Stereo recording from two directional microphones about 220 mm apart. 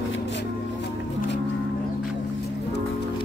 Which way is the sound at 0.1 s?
55° left (ahead or behind).